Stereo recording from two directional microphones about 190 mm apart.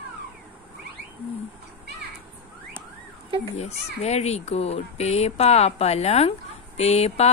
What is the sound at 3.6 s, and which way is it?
Speech, 35° left (ahead or behind).